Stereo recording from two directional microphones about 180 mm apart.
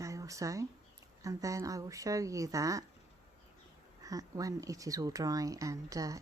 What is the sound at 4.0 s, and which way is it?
Speech, 20° right (ahead or behind).